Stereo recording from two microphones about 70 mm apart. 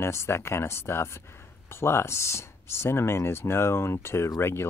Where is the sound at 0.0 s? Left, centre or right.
Left.